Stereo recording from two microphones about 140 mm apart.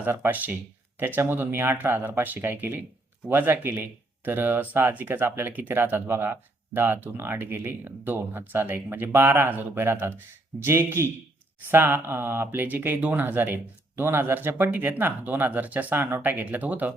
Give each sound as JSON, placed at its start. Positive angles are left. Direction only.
{"t": 0.0, "sound": "speech", "side_deg": -15}